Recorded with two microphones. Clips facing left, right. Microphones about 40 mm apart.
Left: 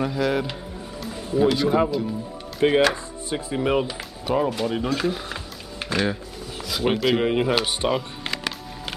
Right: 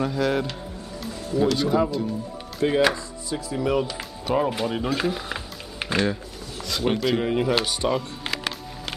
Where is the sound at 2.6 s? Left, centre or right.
Left.